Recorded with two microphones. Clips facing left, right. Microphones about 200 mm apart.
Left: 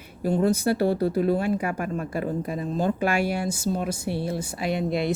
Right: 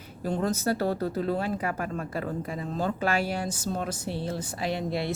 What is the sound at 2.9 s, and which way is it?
A woman's voice, 15° left (ahead or behind).